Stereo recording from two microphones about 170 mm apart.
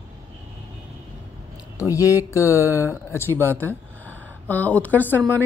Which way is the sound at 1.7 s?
20° left (ahead or behind).